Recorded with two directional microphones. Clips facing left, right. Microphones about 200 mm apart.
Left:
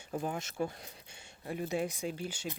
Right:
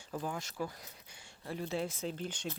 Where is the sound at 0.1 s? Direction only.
25° left (ahead or behind).